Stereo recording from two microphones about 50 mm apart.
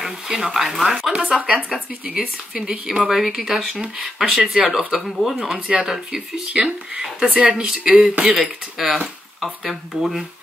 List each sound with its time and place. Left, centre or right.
0.0 s speech: centre
6.4 s speech: centre
8.4 s speech: centre